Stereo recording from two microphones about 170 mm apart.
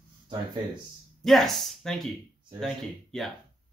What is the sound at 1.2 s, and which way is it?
Speech, centre (ahead or behind).